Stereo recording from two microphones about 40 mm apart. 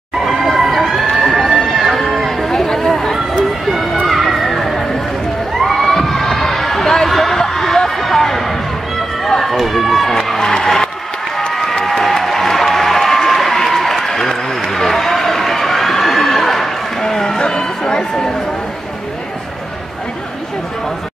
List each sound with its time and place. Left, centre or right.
0.2 s crowd: centre
0.6 s run: centre
2.4 s chatter: centre
3.0 s run: centre
4.1 s a sound: centre
9.4 s run: centre
11.8 s applause: centre
17.4 s a sound: centre